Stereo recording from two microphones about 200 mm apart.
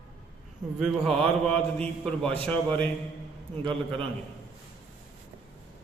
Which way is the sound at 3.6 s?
25° right (ahead or behind).